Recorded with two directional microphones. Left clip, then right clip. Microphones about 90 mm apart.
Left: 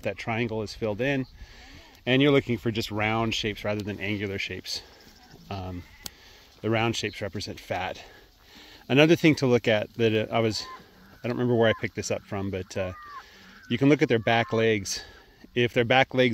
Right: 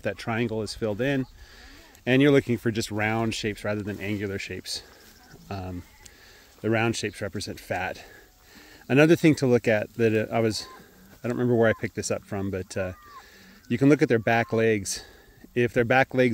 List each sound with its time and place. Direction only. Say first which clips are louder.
0.0 s speech: right 1 dB; 40° right (ahead or behind)
2.9 s speech: left 2 dB; 20° right (ahead or behind)
4.7 s speech: even; 35° right (ahead or behind)